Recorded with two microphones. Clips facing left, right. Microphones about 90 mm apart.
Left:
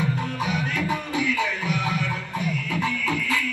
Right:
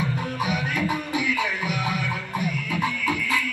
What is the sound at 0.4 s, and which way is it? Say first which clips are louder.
Music: right 1 dB; 15° right (ahead or behind).